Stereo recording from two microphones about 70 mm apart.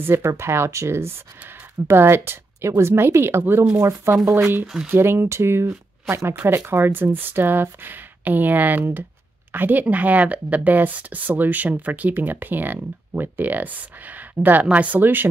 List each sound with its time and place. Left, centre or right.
0.0 s speech: right
4.3 s speech: right